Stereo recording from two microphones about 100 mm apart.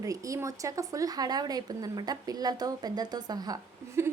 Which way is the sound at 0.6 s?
35° right (ahead or behind).